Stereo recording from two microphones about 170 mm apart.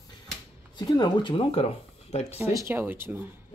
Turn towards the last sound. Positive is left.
turn(degrees=-10)  # may be behind; listen again after turning